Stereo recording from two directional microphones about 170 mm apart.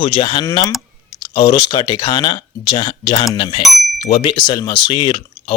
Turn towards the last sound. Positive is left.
turn(degrees=30)  # may be behind; listen again after turning